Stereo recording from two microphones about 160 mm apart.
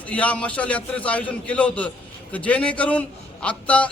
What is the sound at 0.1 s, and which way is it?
A man's voice, 10° left (ahead or behind).